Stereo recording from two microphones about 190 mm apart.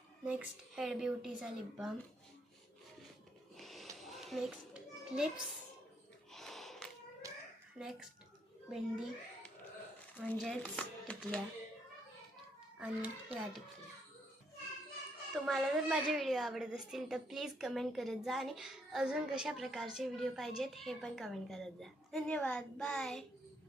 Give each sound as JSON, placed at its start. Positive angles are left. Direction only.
{"t": 0.3, "sound": "a woman's voice", "side_deg": -5}
{"t": 3.6, "sound": "children playing", "side_deg": 0}
{"t": 6.3, "sound": "gasp", "side_deg": 0}
{"t": 7.2, "sound": "a sound", "side_deg": -15}
{"t": 7.8, "sound": "a woman's voice", "side_deg": -5}
{"t": 12.8, "sound": "a child's voice", "side_deg": -5}
{"t": 15.3, "sound": "a woman's voice", "side_deg": 0}